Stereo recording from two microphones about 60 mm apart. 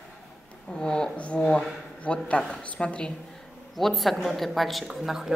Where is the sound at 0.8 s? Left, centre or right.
Centre.